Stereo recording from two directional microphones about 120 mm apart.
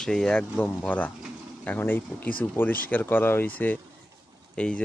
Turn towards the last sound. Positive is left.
turn(degrees=10)  # may be behind; listen again after turning